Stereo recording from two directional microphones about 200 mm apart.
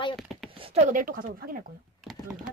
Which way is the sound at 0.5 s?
30° right (ahead or behind).